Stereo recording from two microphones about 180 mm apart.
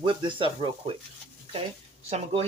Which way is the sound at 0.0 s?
25° right (ahead or behind).